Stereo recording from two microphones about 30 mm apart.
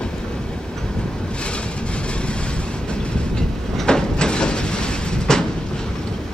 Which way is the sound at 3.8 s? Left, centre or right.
Left.